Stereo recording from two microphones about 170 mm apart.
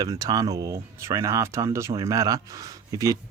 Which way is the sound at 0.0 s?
20° right (ahead or behind).